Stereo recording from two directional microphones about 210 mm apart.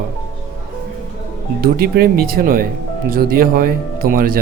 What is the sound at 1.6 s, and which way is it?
Speech, 45° right (ahead or behind).